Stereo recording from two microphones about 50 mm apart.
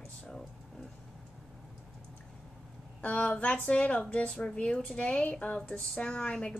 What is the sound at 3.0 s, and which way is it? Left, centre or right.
A woman's voice, left.